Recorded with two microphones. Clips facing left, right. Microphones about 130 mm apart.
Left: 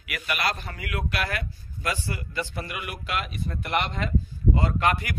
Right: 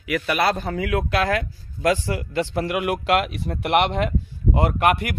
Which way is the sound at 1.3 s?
90° right.